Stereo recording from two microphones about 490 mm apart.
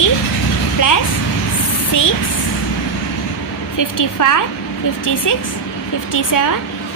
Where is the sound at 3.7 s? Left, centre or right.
Left.